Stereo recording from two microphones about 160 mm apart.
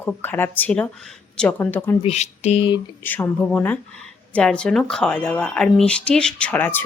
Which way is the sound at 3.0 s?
10° left (ahead or behind).